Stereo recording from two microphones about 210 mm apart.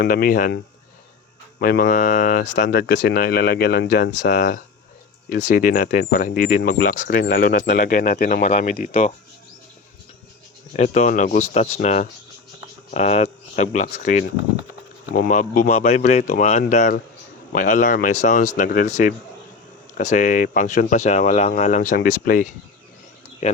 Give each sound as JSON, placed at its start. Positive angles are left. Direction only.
{"t": 0.0, "sound": "speech", "side_deg": 45}
{"t": 10.8, "sound": "speech", "side_deg": 35}